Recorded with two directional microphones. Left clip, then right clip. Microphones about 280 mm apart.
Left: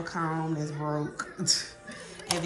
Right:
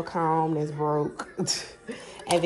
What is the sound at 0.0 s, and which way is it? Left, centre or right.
Speech, centre.